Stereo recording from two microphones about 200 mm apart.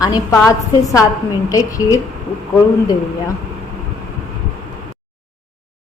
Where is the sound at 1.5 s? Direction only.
15° left (ahead or behind).